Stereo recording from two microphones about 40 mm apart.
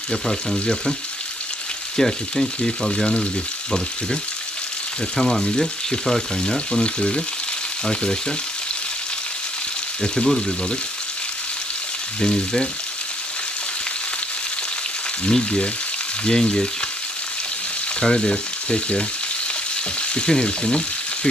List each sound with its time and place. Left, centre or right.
0.1 s frying: centre
2.0 s frying: centre
5.1 s frying: centre
10.0 s frying: centre
12.2 s frying: left
15.2 s frying: left
18.0 s frying: centre
20.0 s frying: left